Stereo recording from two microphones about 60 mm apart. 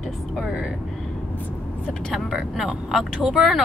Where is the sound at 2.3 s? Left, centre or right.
Centre.